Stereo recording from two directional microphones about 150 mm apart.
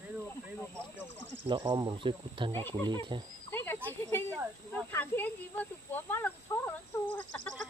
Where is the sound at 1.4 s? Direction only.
35° right (ahead or behind).